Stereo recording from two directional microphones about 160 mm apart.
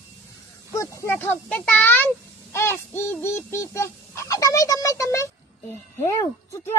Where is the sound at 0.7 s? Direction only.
20° left (ahead or behind).